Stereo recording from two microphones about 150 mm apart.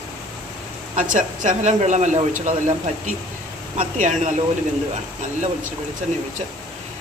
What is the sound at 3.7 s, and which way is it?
Dishes, 50° right (ahead or behind).